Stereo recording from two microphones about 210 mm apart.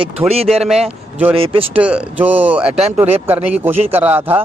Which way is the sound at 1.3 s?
25° right (ahead or behind).